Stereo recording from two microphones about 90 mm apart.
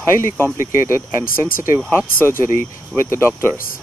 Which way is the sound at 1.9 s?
30° left (ahead or behind).